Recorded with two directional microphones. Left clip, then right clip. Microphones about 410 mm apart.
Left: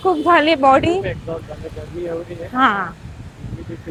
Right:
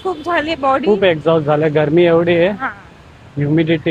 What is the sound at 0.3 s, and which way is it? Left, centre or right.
Speech, centre.